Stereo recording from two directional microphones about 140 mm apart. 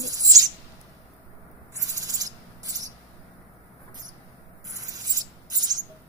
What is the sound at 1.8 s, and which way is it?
Owl, 25° right (ahead or behind).